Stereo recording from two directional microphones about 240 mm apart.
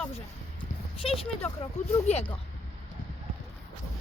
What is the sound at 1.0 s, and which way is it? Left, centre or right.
Speech, left.